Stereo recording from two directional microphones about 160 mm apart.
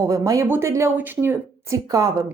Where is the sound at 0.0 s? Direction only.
20° right (ahead or behind).